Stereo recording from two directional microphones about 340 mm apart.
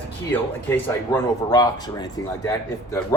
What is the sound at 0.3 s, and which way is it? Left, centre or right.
Speech, centre.